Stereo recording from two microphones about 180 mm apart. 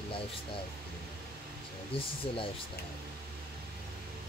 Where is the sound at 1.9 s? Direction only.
30° left (ahead or behind).